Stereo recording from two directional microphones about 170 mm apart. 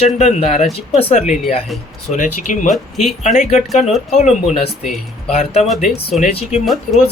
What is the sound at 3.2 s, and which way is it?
Speech, 45° left (ahead or behind).